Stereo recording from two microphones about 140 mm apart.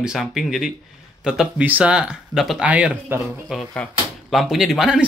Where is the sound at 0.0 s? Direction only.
5° right (ahead or behind).